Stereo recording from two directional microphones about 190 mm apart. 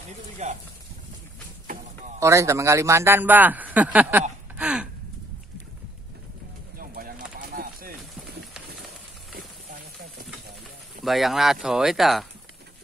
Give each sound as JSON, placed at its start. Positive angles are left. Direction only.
{"t": 0.4, "sound": "speech", "side_deg": -35}
{"t": 2.1, "sound": "a man's voice", "side_deg": -15}
{"t": 6.8, "sound": "bird", "side_deg": -50}
{"t": 7.3, "sound": "a sound", "side_deg": -50}
{"t": 11.1, "sound": "speech", "side_deg": 0}